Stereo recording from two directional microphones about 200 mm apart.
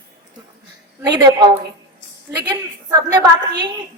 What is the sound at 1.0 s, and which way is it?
A woman's voice, 20° right (ahead or behind).